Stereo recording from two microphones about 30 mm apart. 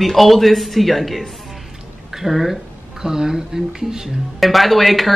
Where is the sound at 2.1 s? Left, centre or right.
Centre.